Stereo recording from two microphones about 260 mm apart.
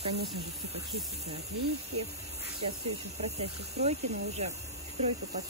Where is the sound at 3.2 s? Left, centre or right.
Right.